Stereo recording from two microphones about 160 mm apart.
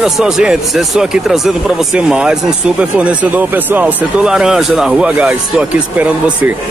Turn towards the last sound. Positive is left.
turn(degrees=-10)  # may be behind; listen again after turning